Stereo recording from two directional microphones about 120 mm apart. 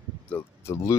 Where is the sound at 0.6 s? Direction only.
25° left (ahead or behind).